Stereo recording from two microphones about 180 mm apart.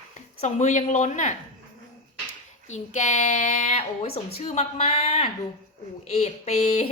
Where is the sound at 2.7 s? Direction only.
40° left (ahead or behind).